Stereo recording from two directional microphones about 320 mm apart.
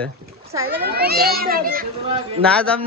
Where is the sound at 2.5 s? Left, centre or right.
Centre.